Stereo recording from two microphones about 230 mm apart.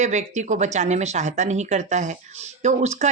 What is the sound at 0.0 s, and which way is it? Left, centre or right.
A woman's voice, right.